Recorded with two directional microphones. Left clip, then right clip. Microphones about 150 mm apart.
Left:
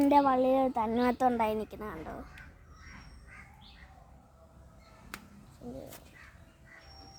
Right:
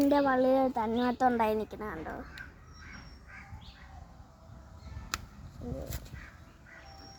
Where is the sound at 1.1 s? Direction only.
20° left (ahead or behind).